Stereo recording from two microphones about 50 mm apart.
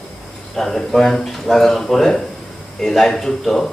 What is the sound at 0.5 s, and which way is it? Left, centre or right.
Speech, centre.